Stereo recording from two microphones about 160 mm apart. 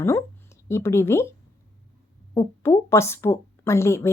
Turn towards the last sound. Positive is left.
turn(degrees=15)  # may be behind; listen again after turning